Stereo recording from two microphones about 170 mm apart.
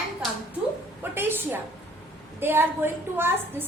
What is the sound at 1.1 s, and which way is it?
A woman's voice, 15° right (ahead or behind).